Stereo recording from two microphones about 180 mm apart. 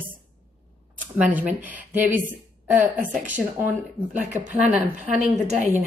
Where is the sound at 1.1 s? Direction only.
10° right (ahead or behind).